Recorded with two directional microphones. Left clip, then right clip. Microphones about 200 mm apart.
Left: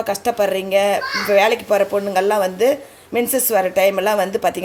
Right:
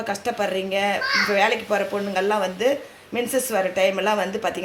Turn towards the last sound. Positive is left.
turn(degrees=55)  # may be behind; listen again after turning